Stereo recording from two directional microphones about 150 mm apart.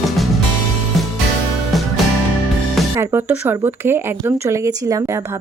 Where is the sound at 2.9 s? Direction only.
15° right (ahead or behind).